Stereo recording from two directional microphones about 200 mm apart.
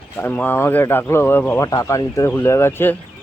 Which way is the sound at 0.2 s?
10° left (ahead or behind).